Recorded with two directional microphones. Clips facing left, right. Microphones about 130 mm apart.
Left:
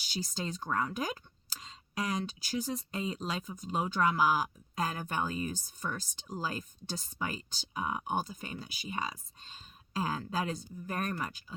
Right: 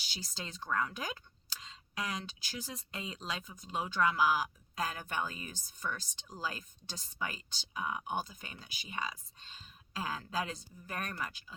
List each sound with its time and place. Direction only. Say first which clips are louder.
0.1 s speech: left 9 dB; 45° left (ahead or behind)